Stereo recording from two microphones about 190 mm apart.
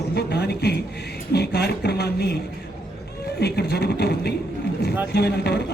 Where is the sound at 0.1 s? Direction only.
60° left (ahead or behind).